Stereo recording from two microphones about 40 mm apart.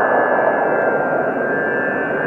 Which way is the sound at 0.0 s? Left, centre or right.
Centre.